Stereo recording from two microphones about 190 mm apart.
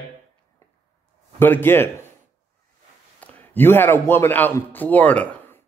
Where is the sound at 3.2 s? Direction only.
10° left (ahead or behind).